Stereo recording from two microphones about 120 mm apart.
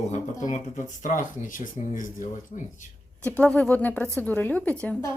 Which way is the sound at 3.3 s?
10° left (ahead or behind).